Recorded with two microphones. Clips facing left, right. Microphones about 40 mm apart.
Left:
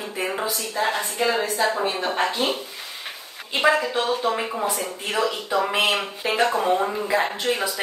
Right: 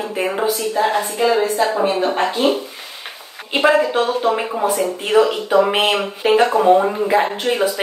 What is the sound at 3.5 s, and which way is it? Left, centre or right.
A woman's voice, right.